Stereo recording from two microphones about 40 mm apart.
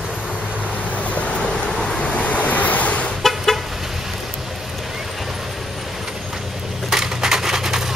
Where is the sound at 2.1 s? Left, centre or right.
Left.